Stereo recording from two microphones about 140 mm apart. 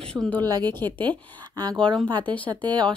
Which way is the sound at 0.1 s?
10° left (ahead or behind).